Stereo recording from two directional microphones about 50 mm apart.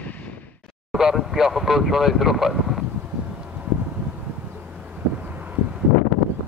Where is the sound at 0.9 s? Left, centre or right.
Centre.